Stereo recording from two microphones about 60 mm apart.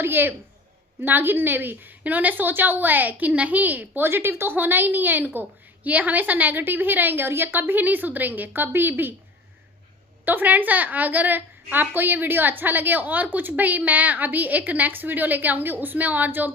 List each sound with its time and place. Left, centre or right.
0.0 s a woman's voice: right
10.2 s a woman's voice: right